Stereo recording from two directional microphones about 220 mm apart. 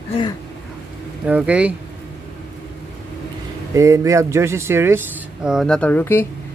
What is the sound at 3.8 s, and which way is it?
Speech, 15° right (ahead or behind).